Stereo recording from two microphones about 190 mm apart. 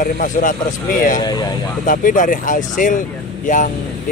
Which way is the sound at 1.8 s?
45° left (ahead or behind).